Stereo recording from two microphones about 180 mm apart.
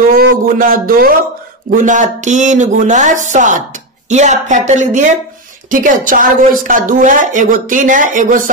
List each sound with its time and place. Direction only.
0.1 s a woman's voice: 50° right (ahead or behind)